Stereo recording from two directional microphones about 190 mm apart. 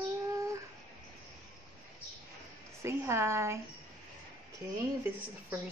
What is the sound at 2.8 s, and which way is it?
Speech, 15° right (ahead or behind).